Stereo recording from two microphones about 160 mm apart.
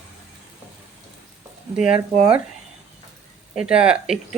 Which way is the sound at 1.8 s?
5° right (ahead or behind).